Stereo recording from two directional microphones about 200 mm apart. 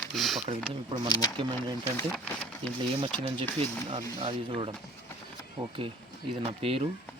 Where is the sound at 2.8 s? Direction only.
25° right (ahead or behind).